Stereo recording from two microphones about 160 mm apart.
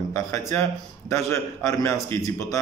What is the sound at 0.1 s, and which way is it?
A man's voice, 20° left (ahead or behind).